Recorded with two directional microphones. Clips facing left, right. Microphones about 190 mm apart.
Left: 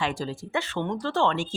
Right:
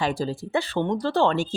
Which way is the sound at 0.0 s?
35° right (ahead or behind).